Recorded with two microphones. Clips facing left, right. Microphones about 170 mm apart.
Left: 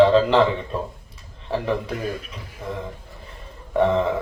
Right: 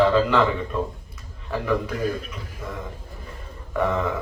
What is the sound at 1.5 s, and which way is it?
Speech, 30° left (ahead or behind).